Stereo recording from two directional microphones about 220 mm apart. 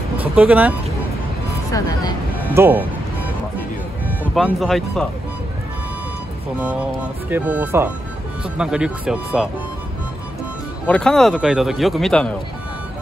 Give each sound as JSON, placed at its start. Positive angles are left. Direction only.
{"t": 0.2, "sound": "speech", "side_deg": -5}
{"t": 1.5, "sound": "speech", "side_deg": 15}
{"t": 2.5, "sound": "speech", "side_deg": -10}
{"t": 4.2, "sound": "speech", "side_deg": 0}
{"t": 6.6, "sound": "speech", "side_deg": -5}
{"t": 10.9, "sound": "speech", "side_deg": 5}